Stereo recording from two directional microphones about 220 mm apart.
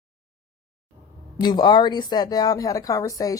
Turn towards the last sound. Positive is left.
turn(degrees=15)  # may be behind; listen again after turning